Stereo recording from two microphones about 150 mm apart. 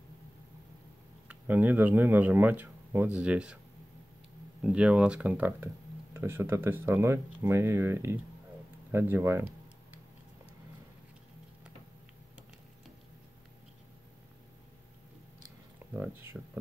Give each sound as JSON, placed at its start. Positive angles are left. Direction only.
{"t": 1.3, "sound": "speech", "side_deg": -10}
{"t": 4.6, "sound": "speech", "side_deg": -5}
{"t": 16.0, "sound": "speech", "side_deg": -15}